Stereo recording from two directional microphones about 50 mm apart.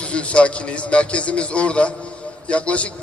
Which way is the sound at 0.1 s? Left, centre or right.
Left.